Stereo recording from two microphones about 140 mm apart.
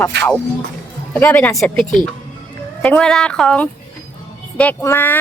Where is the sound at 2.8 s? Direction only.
5° left (ahead or behind).